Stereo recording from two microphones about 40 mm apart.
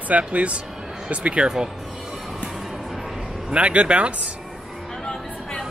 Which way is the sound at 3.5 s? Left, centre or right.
Right.